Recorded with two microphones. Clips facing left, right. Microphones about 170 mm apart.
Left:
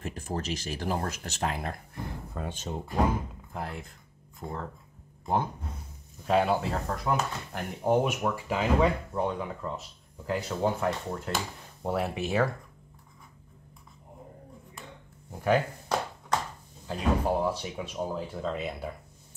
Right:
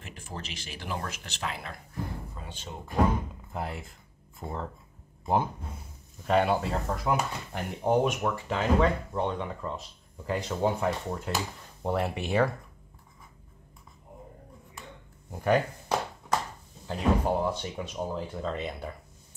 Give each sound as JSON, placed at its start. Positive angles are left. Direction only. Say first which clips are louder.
{"t": 0.0, "sound": "speech", "louder": "left 7 dB", "side_deg": 40}
{"t": 3.5, "sound": "speech", "louder": "right 2 dB", "side_deg": -5}
{"t": 15.3, "sound": "speech", "louder": "even", "side_deg": 0}
{"t": 16.8, "sound": "speech", "louder": "right 1 dB", "side_deg": 5}